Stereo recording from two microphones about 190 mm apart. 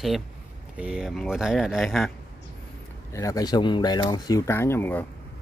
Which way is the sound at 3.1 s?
15° left (ahead or behind).